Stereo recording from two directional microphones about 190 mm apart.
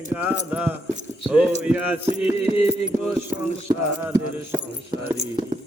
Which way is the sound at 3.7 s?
15° right (ahead or behind).